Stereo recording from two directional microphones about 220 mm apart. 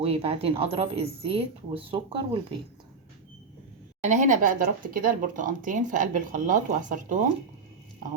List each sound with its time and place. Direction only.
0.0 s speech: 25° right (ahead or behind)
4.0 s speech: 35° right (ahead or behind)